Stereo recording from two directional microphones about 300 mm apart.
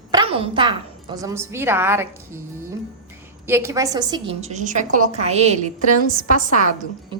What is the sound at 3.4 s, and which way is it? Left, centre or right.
A woman's voice, centre.